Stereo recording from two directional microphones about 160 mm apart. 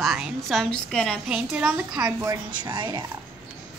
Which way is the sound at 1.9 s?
25° right (ahead or behind).